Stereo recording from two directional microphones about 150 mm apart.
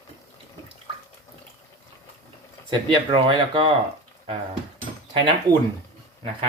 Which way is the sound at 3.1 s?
35° right (ahead or behind).